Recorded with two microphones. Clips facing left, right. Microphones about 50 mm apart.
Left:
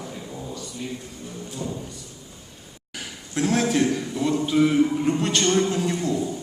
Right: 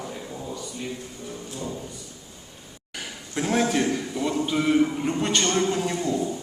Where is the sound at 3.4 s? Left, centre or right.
Centre.